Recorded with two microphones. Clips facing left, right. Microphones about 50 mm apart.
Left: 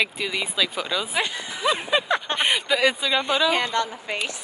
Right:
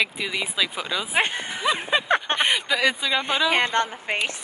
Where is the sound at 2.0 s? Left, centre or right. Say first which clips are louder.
Right 2 dB; right.